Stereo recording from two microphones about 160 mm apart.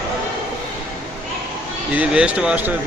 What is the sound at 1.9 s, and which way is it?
Speech, 5° right (ahead or behind).